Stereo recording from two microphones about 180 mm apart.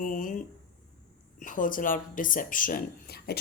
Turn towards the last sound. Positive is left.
turn(degrees=60)  # may be behind; listen again after turning